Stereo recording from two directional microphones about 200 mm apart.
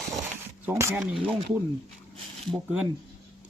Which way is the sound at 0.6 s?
15° right (ahead or behind).